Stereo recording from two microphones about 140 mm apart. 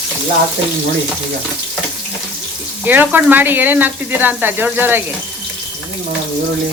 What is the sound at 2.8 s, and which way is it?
Speech, 15° right (ahead or behind).